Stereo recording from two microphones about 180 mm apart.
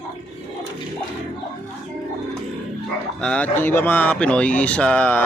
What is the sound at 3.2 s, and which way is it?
Speech, 5° left (ahead or behind).